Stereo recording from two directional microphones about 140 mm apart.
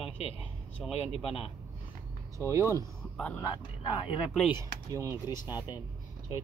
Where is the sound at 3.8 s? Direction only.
35° left (ahead or behind).